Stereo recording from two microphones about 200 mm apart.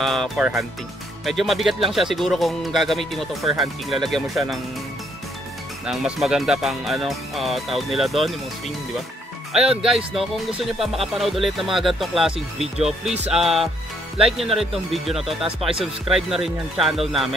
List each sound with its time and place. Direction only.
0.0 s speech: centre (ahead or behind)
5.9 s speech: centre (ahead or behind)
9.5 s speech: 5° right (ahead or behind)